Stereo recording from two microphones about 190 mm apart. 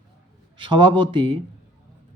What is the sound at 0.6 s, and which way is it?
Speech, 25° right (ahead or behind).